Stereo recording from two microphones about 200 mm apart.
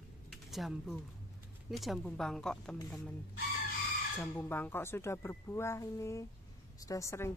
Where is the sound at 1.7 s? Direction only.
Centre (ahead or behind).